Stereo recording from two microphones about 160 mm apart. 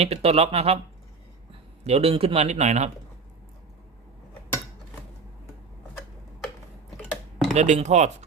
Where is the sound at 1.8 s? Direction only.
40° right (ahead or behind).